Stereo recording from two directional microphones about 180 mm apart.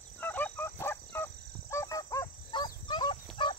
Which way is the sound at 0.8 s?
15° left (ahead or behind).